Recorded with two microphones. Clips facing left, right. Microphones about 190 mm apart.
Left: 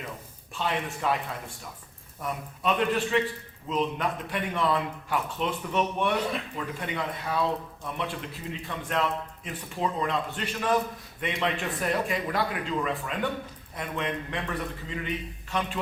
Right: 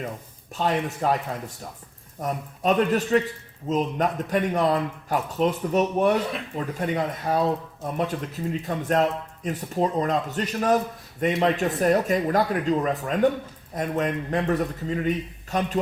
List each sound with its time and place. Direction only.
0.5 s a man's voice: 40° right (ahead or behind)